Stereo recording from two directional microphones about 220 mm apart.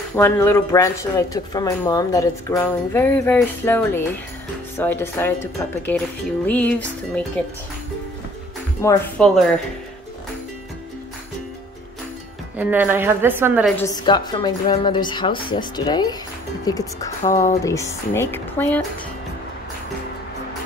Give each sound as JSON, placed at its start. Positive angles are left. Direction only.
{"t": 0.1, "sound": "speech", "side_deg": 10}
{"t": 8.8, "sound": "speech", "side_deg": 5}
{"t": 12.5, "sound": "a woman's voice", "side_deg": -10}
{"t": 13.7, "sound": "a woman's voice", "side_deg": 15}
{"t": 17.2, "sound": "speech", "side_deg": 35}
{"t": 17.6, "sound": "speech", "side_deg": 15}